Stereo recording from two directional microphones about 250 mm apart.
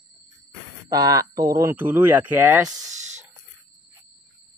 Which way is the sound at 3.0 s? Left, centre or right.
Right.